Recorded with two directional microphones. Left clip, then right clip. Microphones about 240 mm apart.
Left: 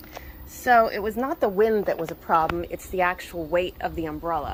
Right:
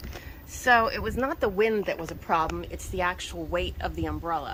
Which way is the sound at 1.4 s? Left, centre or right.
Centre.